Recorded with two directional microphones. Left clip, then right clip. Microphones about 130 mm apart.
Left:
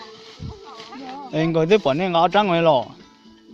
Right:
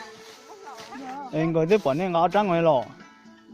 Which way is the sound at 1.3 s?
20° left (ahead or behind).